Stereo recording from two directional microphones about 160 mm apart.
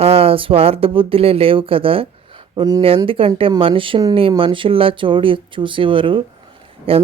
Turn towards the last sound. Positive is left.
turn(degrees=-35)  # may be behind; listen again after turning